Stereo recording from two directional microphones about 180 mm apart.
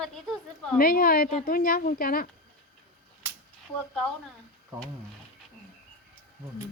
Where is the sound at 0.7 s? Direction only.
55° left (ahead or behind).